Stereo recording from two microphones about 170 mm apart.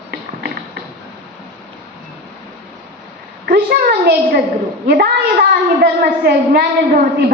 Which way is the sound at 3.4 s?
65° right (ahead or behind).